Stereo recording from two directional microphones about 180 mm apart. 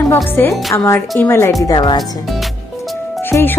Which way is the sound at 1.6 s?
25° left (ahead or behind).